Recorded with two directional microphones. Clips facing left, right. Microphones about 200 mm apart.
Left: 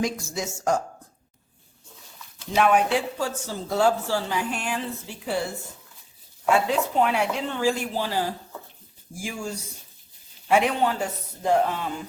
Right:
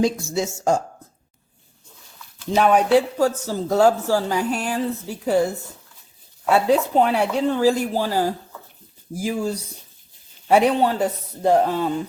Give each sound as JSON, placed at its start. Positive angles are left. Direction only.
{"t": 0.0, "sound": "speech", "side_deg": -25}
{"t": 2.6, "sound": "speech", "side_deg": -35}